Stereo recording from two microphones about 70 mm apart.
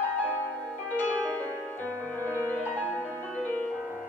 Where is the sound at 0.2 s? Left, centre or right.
Left.